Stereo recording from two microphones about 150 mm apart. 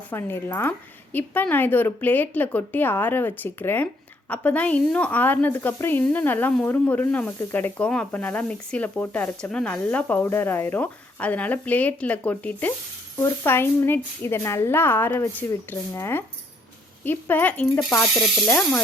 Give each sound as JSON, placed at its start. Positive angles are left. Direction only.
{"t": 0.1, "sound": "speech", "side_deg": 15}